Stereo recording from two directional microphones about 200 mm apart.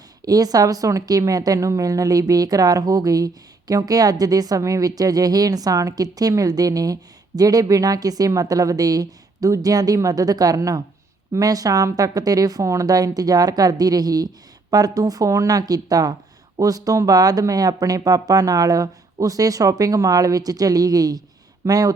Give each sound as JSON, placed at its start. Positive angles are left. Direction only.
{"t": 0.3, "sound": "a woman's voice", "side_deg": -20}